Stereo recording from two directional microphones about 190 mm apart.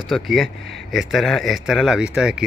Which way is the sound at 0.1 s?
Centre (ahead or behind).